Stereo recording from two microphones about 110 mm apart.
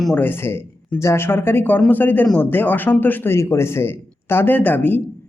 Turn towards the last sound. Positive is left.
turn(degrees=15)  # may be behind; listen again after turning